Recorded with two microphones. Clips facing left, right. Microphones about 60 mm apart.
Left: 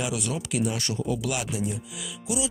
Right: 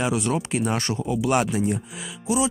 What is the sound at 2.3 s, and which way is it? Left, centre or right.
Speech, right.